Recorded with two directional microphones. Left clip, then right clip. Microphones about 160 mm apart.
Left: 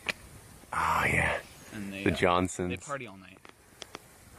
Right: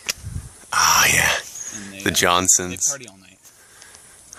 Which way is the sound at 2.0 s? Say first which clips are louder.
Right 8 dB; 15° right (ahead or behind).